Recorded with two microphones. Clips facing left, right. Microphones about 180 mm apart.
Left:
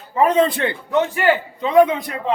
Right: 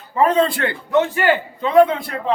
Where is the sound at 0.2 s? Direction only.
20° left (ahead or behind).